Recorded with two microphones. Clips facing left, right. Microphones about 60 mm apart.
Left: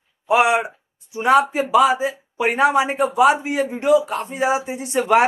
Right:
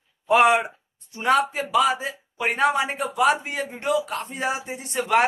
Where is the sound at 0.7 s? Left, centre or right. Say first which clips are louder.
Left 3 dB; centre.